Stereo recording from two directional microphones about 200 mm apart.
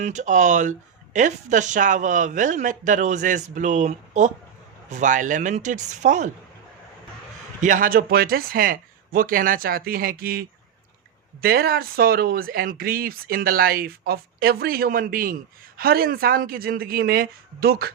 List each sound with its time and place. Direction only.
0.0 s speech: 35° right (ahead or behind)
7.6 s speech: 40° right (ahead or behind)